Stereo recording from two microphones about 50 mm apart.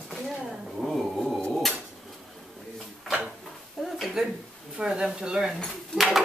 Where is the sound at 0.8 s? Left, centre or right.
Centre.